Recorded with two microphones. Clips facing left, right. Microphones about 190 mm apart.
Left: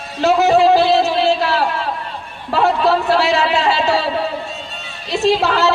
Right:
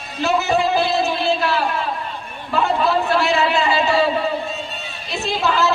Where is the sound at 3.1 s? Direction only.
80° left.